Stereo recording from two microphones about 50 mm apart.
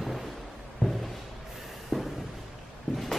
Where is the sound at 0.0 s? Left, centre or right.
Centre.